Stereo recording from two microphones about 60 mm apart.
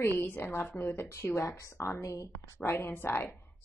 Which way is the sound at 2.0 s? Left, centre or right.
Left.